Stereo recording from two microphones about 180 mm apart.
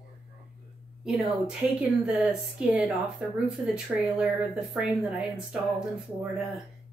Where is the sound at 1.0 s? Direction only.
Centre (ahead or behind).